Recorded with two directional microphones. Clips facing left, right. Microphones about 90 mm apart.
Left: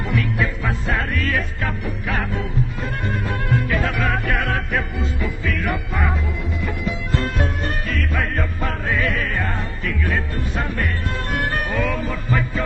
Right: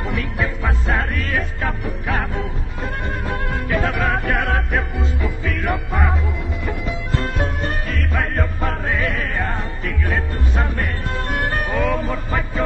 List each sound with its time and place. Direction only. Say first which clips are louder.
0.1 s music: left 4 dB; 25° right (ahead or behind)
7.6 s music: even; 25° right (ahead or behind)